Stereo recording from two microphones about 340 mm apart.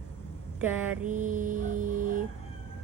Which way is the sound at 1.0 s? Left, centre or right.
Right.